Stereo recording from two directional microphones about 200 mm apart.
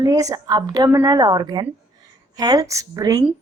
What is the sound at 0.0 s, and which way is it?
A woman's voice, 20° right (ahead or behind).